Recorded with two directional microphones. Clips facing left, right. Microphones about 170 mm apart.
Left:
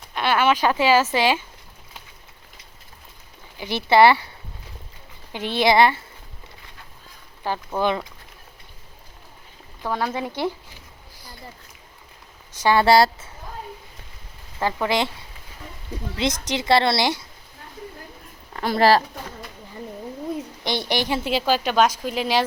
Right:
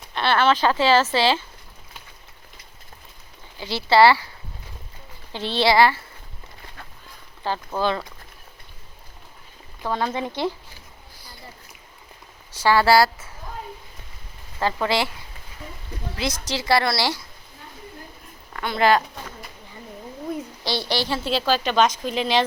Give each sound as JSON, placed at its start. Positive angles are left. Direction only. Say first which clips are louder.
{"t": 0.1, "sound": "speech", "louder": "even", "side_deg": 10}
{"t": 3.6, "sound": "a woman's voice", "louder": "left 1 dB", "side_deg": 20}
{"t": 5.3, "sound": "speech", "louder": "left 1 dB", "side_deg": 15}
{"t": 7.4, "sound": "speech", "louder": "left 1 dB", "side_deg": 15}
{"t": 9.8, "sound": "speech", "louder": "even", "side_deg": 10}
{"t": 12.6, "sound": "a woman's voice", "louder": "left 1 dB", "side_deg": 20}
{"t": 14.6, "sound": "speech", "louder": "even", "side_deg": 15}
{"t": 16.1, "sound": "a woman's voice", "louder": "left 3 dB", "side_deg": 20}
{"t": 18.5, "sound": "speech", "louder": "left 2 dB", "side_deg": 35}
{"t": 20.7, "sound": "speech", "louder": "left 1 dB", "side_deg": 15}